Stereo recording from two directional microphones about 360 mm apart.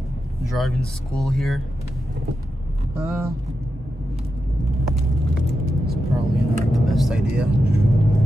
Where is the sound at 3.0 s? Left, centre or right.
Centre.